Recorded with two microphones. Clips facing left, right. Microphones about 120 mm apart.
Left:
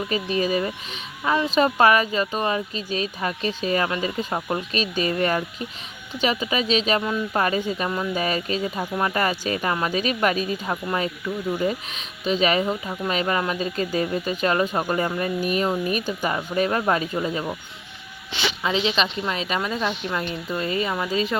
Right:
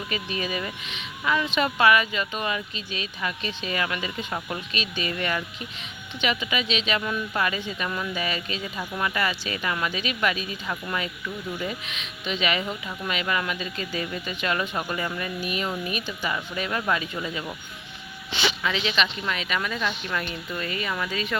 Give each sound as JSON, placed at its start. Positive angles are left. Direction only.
{"t": 0.1, "sound": "speech", "side_deg": 35}
{"t": 18.6, "sound": "speech", "side_deg": 30}